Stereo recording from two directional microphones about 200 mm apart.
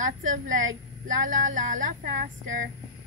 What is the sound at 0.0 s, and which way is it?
Speech, 40° right (ahead or behind).